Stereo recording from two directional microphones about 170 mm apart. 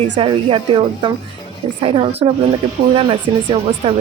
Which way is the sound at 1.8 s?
35° right (ahead or behind).